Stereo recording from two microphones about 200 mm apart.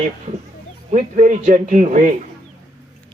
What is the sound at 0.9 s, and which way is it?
A man's voice, 35° right (ahead or behind).